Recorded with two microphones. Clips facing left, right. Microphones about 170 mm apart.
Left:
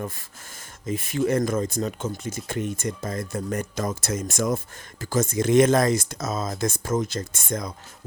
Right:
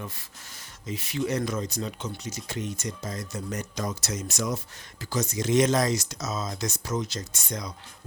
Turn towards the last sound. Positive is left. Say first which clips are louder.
# left 5 dB
turn(degrees=50)  # may be behind; listen again after turning